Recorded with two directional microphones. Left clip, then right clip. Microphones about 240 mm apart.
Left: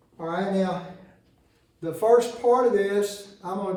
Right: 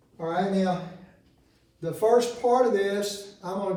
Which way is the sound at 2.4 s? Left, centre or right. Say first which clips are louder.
Left 2 dB; centre.